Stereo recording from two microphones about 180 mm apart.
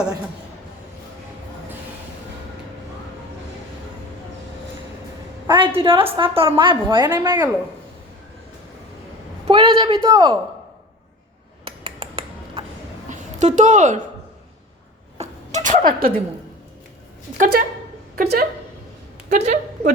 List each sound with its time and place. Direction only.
5.5 s a woman's voice: 25° right (ahead or behind)
9.5 s a man's voice: 25° right (ahead or behind)
11.6 s a sound: 30° right (ahead or behind)
13.1 s a woman's voice: 40° right (ahead or behind)
15.2 s a sound: 45° right (ahead or behind)
17.3 s speech: 50° right (ahead or behind)
19.3 s a woman's voice: 40° right (ahead or behind)